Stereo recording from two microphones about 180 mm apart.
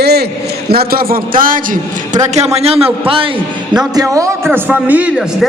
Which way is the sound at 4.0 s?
15° right (ahead or behind).